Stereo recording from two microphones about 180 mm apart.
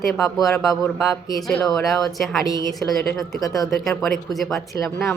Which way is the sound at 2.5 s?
20° left (ahead or behind).